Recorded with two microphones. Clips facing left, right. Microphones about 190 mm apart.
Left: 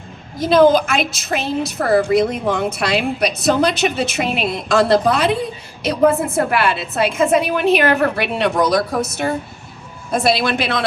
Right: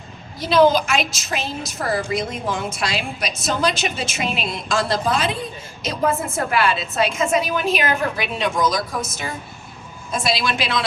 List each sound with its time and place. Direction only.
0.3 s a woman's voice: 50° left (ahead or behind)